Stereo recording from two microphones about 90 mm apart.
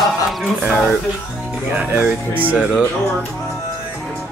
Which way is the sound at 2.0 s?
20° right (ahead or behind).